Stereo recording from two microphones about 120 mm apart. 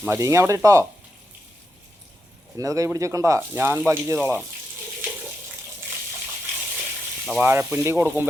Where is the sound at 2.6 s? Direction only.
25° right (ahead or behind).